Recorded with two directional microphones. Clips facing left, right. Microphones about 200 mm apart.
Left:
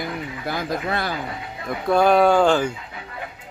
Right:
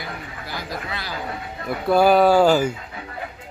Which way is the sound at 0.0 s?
50° left (ahead or behind).